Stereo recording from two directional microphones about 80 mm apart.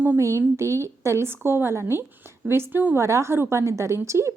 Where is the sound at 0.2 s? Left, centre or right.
Right.